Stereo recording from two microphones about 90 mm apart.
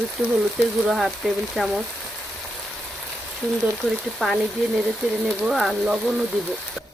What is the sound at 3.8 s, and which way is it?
Speech, centre (ahead or behind).